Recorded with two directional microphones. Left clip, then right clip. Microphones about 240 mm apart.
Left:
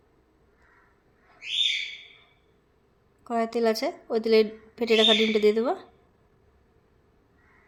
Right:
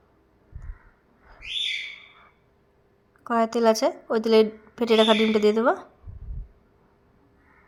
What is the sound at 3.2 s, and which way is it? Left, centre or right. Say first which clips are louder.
A woman's voice: right 4 dB; centre.